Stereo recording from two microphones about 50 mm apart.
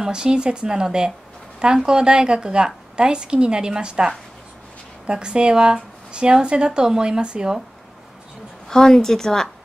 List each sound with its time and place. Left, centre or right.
0.0 s speech: centre
8.6 s a woman's voice: centre